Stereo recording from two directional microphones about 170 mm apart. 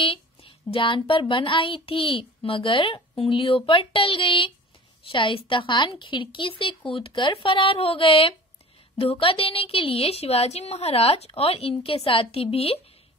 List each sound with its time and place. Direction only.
0.0 s a woman's voice: 30° left (ahead or behind)